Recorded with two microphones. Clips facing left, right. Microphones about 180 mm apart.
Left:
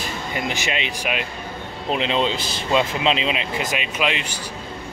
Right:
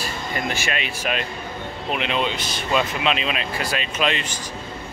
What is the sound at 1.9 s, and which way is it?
Speech, 25° left (ahead or behind).